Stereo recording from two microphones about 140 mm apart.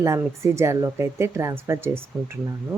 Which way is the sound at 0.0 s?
20° right (ahead or behind).